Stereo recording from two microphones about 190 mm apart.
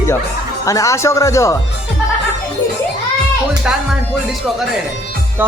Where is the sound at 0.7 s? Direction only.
15° left (ahead or behind).